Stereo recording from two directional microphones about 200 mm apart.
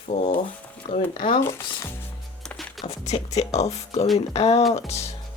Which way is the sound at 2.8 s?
35° left (ahead or behind).